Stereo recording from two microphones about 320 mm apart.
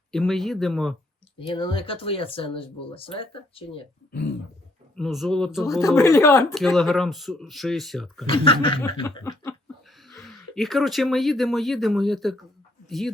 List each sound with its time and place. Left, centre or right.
0.1 s speech: centre
1.4 s speech: centre
4.9 s speech: centre
5.8 s speech: centre
8.3 s speech: centre